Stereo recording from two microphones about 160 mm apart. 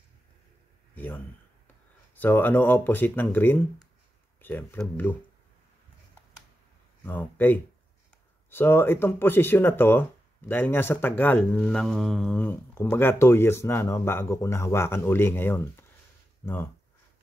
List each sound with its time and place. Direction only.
0.9 s speech: 10° left (ahead or behind)
7.0 s speech: 10° left (ahead or behind)